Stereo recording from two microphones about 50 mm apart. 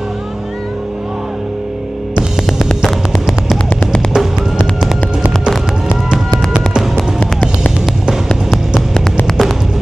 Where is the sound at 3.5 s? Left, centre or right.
Centre.